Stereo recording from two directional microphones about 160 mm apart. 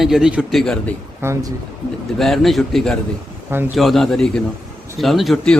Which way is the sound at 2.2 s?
Centre (ahead or behind).